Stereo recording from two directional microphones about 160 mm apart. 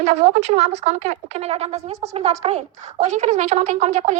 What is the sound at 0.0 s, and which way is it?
Speech, 45° right (ahead or behind).